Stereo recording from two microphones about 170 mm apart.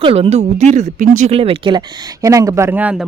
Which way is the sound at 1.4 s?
30° right (ahead or behind).